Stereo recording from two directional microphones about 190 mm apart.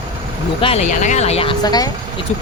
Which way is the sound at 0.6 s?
30° left (ahead or behind).